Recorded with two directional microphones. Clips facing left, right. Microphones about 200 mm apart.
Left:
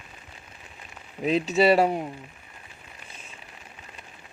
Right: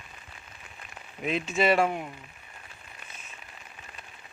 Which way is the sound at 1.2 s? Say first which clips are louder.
Left 5 dB; 35° left (ahead or behind).